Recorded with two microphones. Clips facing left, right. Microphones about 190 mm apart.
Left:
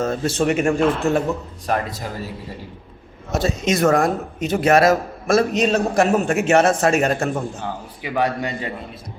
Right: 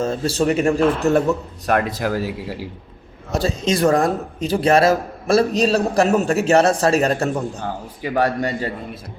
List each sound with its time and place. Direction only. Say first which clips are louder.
0.0 s a man's voice: right 1 dB; 30° right (ahead or behind)
1.1 s speech: right 3 dB; 65° right (ahead or behind); by 2.6 s 90° right
3.3 s a man's voice: even; 30° right (ahead or behind)